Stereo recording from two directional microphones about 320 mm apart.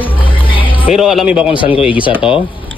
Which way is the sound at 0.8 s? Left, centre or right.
Centre.